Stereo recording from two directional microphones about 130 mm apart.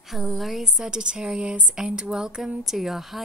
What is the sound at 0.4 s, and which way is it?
A woman's voice, centre (ahead or behind).